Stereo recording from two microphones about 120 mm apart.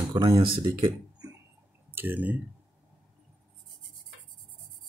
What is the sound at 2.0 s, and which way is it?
Speech, 15° right (ahead or behind).